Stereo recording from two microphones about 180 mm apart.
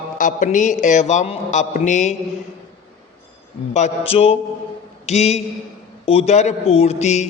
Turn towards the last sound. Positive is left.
turn(degrees=40)  # may be behind; listen again after turning